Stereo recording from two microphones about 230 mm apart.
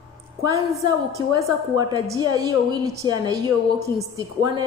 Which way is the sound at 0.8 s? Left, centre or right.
Centre.